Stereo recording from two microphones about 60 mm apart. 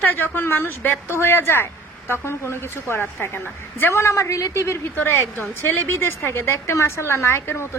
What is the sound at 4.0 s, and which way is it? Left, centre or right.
Speech, left.